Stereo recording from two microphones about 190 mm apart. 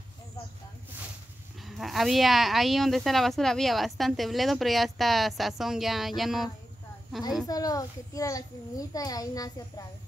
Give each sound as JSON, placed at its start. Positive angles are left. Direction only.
{"t": 1.7, "sound": "speech", "side_deg": 0}
{"t": 7.4, "sound": "a child's voice", "side_deg": 20}